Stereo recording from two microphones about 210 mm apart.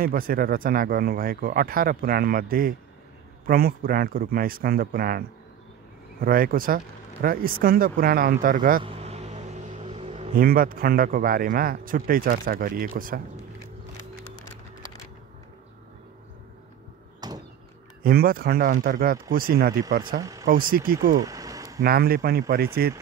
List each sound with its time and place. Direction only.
0.0 s a man's voice: 45° right (ahead or behind)
6.2 s a man's voice: 45° right (ahead or behind)
8.8 s vehicle: 30° right (ahead or behind)
10.3 s a man's voice: 45° right (ahead or behind)
17.2 s door: 20° right (ahead or behind)
18.0 s a man's voice: 45° right (ahead or behind)
20.2 s speech: 15° right (ahead or behind)
20.4 s a man's voice: 45° right (ahead or behind)
21.2 s a sound: 15° right (ahead or behind)
21.8 s a man's voice: 45° right (ahead or behind)